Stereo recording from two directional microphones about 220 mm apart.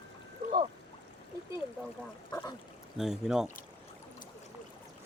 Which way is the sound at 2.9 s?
Centre (ahead or behind).